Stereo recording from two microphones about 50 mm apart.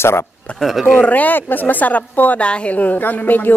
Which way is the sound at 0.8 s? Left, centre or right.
Left.